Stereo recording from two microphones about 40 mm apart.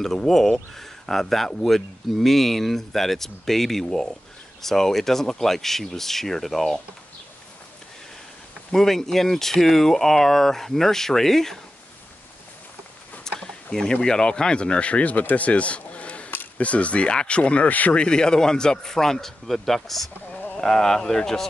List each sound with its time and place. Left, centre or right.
0.0 s speech: centre
8.7 s speech: centre
13.3 s a sound: centre
13.7 s speech: centre; by 17.9 s left
17.9 s speech: left